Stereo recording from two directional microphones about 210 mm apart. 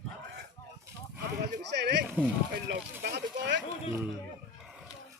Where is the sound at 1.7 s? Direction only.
55° right (ahead or behind).